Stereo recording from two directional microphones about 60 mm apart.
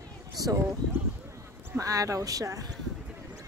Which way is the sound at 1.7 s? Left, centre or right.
Right.